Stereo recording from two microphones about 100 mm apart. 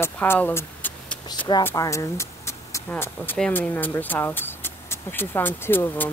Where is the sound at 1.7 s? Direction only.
30° left (ahead or behind).